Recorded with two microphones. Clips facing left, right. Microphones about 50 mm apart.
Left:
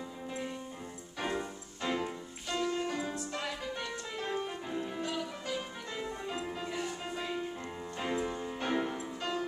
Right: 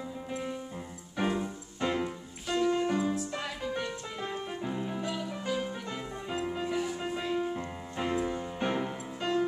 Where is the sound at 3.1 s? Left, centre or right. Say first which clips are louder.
Right 3 dB; centre.